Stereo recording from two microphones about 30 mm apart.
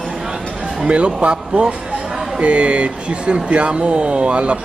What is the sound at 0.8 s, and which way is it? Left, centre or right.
Speech, right.